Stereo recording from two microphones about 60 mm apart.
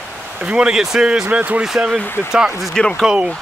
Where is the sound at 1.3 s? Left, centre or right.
Right.